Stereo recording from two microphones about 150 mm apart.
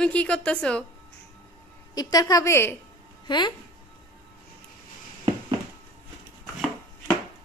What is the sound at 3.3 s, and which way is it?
Speech, 30° left (ahead or behind).